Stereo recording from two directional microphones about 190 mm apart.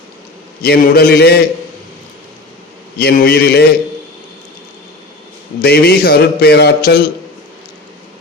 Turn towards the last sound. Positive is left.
turn(degrees=55)  # may be behind; listen again after turning